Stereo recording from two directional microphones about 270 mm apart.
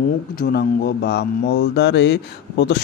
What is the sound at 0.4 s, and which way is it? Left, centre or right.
Speech, left.